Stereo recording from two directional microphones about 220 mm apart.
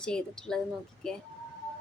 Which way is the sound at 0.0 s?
5° left (ahead or behind).